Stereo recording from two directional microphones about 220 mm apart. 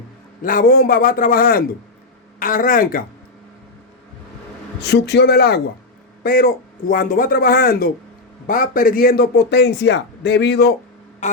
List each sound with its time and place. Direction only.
0.4 s a man's voice: 40° left (ahead or behind)
4.8 s a man's voice: 50° left (ahead or behind)
11.2 s a sound: 35° left (ahead or behind)